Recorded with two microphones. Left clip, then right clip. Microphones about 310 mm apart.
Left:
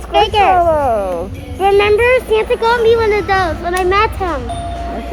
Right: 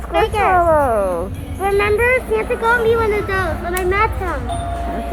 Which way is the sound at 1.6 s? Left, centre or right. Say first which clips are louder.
Left 5 dB; left.